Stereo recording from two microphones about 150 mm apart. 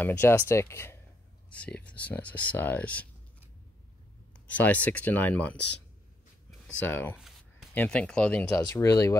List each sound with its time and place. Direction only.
0.0 s speech: 15° left (ahead or behind)
4.5 s speech: 10° left (ahead or behind)
6.8 s speech: 15° left (ahead or behind)
8.7 s speech: 20° left (ahead or behind)